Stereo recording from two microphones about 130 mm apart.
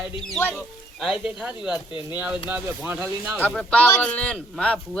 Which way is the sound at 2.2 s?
15° right (ahead or behind).